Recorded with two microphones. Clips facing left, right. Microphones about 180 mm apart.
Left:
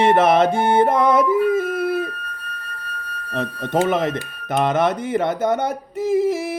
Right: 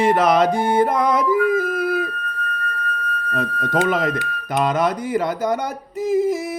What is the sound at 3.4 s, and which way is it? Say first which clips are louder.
Speech: left 1 dB; 25° left (ahead or behind).